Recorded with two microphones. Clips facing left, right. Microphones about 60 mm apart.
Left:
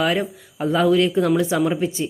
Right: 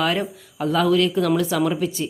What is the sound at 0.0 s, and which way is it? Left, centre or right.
Speech, centre.